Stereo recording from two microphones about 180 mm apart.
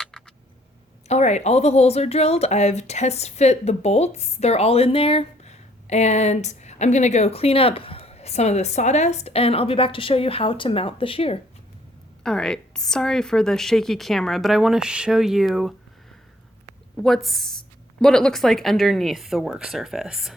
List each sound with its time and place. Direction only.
1.0 s speech: 40° left (ahead or behind)
12.2 s a woman's voice: 5° left (ahead or behind)
17.2 s a woman's voice: centre (ahead or behind)